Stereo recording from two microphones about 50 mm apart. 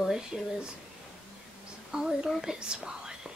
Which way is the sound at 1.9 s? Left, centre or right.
Centre.